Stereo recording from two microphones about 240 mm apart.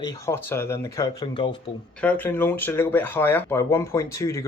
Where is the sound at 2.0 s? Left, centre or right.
Centre.